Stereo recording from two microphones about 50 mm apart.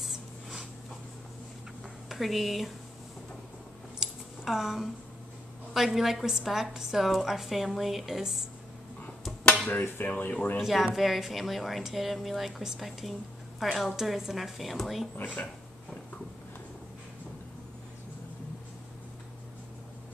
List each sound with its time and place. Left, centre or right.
0.0 s a sound: centre
2.0 s speech: centre
4.0 s a sound: centre
5.7 s a woman's voice: centre
9.8 s dishes: left
10.0 s speech: left
10.6 s speech: centre